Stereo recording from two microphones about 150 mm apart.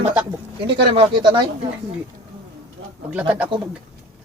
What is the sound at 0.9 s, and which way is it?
Speech, 30° right (ahead or behind).